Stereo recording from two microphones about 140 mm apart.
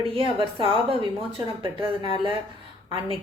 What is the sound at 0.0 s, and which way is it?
A woman's voice, 40° right (ahead or behind).